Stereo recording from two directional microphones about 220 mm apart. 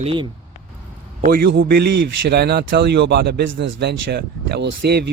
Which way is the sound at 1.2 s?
40° right (ahead or behind).